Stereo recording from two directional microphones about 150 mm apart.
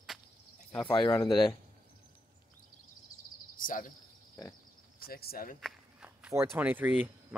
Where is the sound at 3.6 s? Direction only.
60° left (ahead or behind).